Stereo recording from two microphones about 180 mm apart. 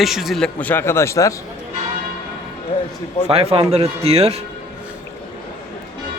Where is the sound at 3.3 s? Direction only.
35° right (ahead or behind).